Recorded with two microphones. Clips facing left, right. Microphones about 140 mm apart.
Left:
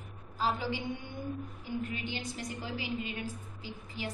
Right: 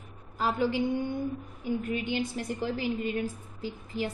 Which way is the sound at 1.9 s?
50° right (ahead or behind).